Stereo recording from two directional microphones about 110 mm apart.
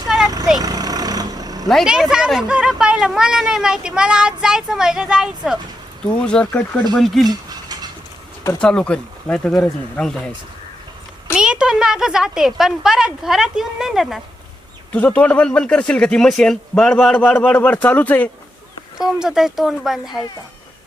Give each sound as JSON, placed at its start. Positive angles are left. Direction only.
{"t": 0.6, "sound": "vehicle", "side_deg": -35}
{"t": 1.6, "sound": "speech", "side_deg": 0}
{"t": 6.2, "sound": "speech", "side_deg": 10}
{"t": 7.3, "sound": "a sound", "side_deg": -35}
{"t": 8.6, "sound": "speech", "side_deg": 10}
{"t": 11.3, "sound": "speech", "side_deg": -5}
{"t": 14.9, "sound": "speech", "side_deg": 15}
{"t": 18.9, "sound": "speech", "side_deg": -5}